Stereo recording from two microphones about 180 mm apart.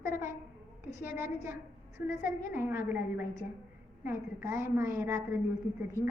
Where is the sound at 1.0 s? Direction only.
15° right (ahead or behind).